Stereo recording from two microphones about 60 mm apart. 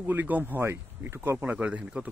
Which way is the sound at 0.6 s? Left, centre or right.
Right.